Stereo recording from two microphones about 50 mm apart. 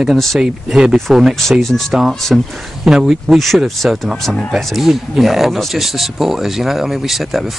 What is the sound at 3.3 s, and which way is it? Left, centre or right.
Speech, centre.